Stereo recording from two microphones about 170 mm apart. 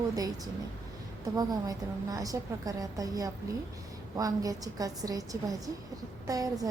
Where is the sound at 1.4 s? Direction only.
20° right (ahead or behind).